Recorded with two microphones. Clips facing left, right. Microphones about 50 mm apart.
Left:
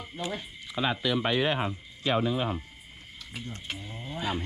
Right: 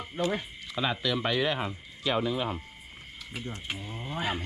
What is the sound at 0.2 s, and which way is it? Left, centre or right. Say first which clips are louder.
Speech: right 6 dB; right.